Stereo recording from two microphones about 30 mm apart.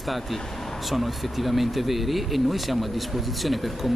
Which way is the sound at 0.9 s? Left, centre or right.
Centre.